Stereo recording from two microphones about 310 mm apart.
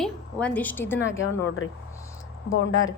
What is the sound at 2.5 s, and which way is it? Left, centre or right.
Speech, left.